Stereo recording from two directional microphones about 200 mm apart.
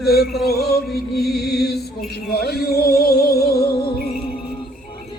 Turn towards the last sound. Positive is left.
turn(degrees=50)  # may be behind; listen again after turning